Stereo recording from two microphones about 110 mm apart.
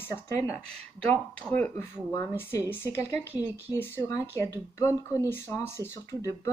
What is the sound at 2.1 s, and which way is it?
Speech, 25° left (ahead or behind).